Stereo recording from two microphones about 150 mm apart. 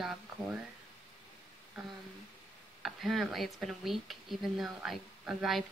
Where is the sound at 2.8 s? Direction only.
Centre (ahead or behind).